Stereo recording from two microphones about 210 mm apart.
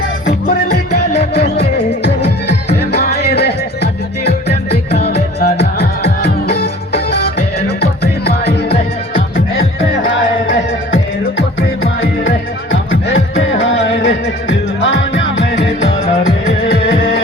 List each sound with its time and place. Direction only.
1.1 s music: 30° left (ahead or behind)
2.7 s music: 50° left (ahead or behind)
6.5 s music: 50° left (ahead or behind)
13.3 s music: 30° left (ahead or behind)
14.8 s music: 55° left (ahead or behind)